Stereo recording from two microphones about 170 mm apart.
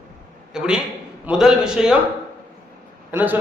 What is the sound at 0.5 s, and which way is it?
A man's voice, 5° right (ahead or behind).